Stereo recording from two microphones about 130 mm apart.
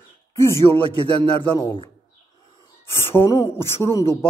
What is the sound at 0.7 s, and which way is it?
Speech, 5° left (ahead or behind).